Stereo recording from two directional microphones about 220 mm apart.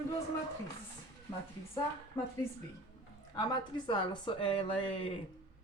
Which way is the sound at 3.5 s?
20° left (ahead or behind).